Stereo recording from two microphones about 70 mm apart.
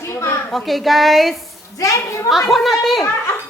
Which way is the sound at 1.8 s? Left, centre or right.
Left.